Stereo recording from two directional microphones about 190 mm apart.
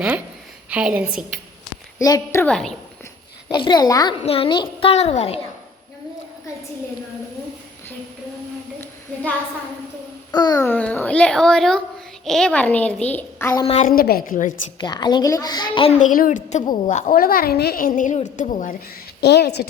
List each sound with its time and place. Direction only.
0.7 s a woman's voice: 5° right (ahead or behind)
2.0 s a child's voice: 15° left (ahead or behind)
3.5 s a child's voice: 25° left (ahead or behind)
4.2 s a child's voice: 30° left (ahead or behind)
10.3 s a child's voice: 20° left (ahead or behind)
13.7 s a child's voice: 35° left (ahead or behind)
13.9 s a woman's voice: 50° left (ahead or behind)
14.8 s a child's voice: 20° left (ahead or behind)
16.0 s a child's voice: 45° left (ahead or behind)
19.2 s a woman's voice: 60° left (ahead or behind)